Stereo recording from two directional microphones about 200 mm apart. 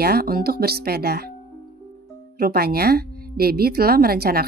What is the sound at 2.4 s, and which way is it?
A woman's voice, 50° right (ahead or behind).